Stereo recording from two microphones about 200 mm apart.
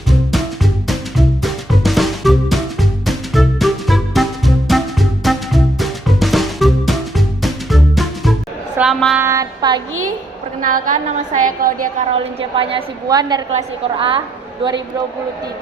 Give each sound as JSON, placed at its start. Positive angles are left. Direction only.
{"t": 0.1, "sound": "music", "side_deg": 0}
{"t": 8.8, "sound": "child singing", "side_deg": 0}
{"t": 9.2, "sound": "child singing", "side_deg": -15}
{"t": 10.6, "sound": "a woman's voice", "side_deg": -40}
{"t": 12.1, "sound": "a woman's voice", "side_deg": -25}
{"t": 13.5, "sound": "a woman's voice", "side_deg": -30}